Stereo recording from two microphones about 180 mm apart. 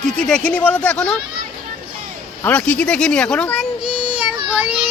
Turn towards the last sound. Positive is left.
turn(degrees=-5)  # may be behind; listen again after turning